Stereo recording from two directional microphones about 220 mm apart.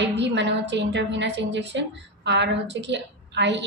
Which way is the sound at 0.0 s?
50° right (ahead or behind).